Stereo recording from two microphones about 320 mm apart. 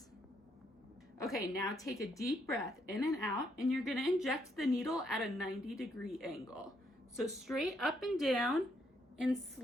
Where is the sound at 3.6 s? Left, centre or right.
Centre.